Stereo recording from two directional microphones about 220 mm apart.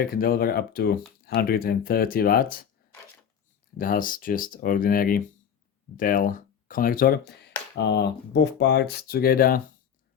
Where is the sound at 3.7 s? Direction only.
40° left (ahead or behind).